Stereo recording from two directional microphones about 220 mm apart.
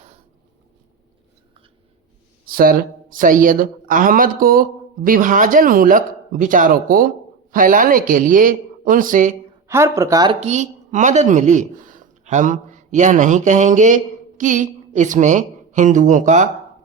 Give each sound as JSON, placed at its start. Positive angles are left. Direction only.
{"t": 2.5, "sound": "speech", "side_deg": -40}
{"t": 9.6, "sound": "speech", "side_deg": -10}
{"t": 10.4, "sound": "speech", "side_deg": -35}